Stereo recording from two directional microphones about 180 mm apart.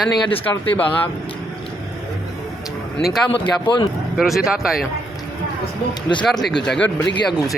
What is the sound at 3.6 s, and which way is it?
Speech, 25° left (ahead or behind).